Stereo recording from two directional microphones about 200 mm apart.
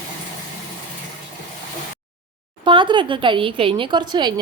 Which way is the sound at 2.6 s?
25° right (ahead or behind).